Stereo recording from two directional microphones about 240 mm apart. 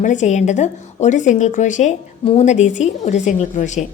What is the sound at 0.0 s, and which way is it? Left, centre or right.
A woman's voice, left.